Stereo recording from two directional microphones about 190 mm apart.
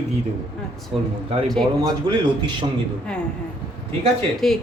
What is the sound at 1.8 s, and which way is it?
Speech, 25° right (ahead or behind).